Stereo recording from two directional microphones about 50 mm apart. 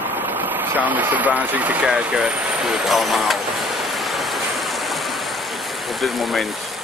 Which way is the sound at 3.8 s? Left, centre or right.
Centre.